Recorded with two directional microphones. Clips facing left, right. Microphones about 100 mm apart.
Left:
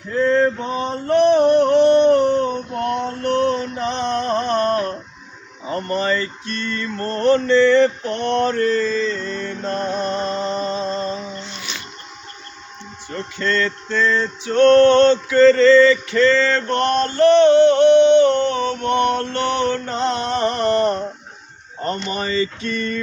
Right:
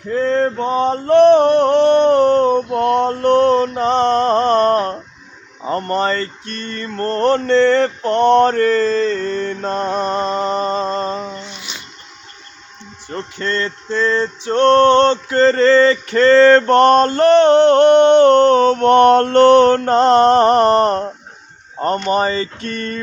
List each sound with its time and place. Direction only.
0.6 s mantra: 80° right
1.2 s a sound: 65° right (ahead or behind)
5.6 s mantra: 55° right (ahead or behind)
9.6 s music: 35° right (ahead or behind)
10.2 s mantra: 50° right (ahead or behind)
11.3 s a sound: 15° right (ahead or behind)
13.4 s music: 30° right (ahead or behind); by 23.0 s 45° right (ahead or behind)